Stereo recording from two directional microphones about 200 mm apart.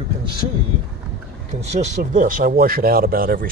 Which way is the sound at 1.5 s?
35° right (ahead or behind).